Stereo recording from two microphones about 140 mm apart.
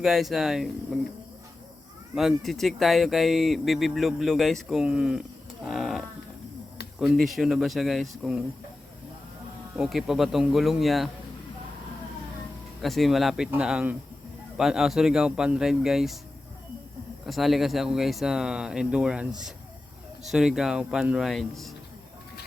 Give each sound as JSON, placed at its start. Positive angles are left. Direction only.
{"t": 0.0, "sound": "speech", "side_deg": 0}
{"t": 2.1, "sound": "speech", "side_deg": 0}
{"t": 5.6, "sound": "livestock", "side_deg": 0}
{"t": 7.0, "sound": "speech", "side_deg": 0}
{"t": 9.7, "sound": "speech", "side_deg": -5}
{"t": 12.8, "sound": "speech", "side_deg": 0}
{"t": 17.2, "sound": "speech", "side_deg": 0}